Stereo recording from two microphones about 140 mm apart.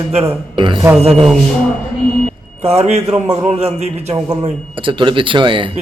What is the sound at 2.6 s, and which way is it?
A man's voice, 50° right (ahead or behind).